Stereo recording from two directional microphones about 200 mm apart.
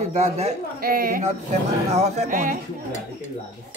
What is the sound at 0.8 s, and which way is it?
Speech, 45° right (ahead or behind).